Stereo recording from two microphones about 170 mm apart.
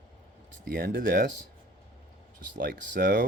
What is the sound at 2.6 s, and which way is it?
Speech, 55° right (ahead or behind).